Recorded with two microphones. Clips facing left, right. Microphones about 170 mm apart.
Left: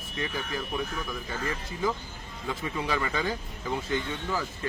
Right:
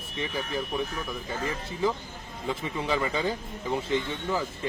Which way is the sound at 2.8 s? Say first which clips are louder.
Right 3 dB; 20° right (ahead or behind).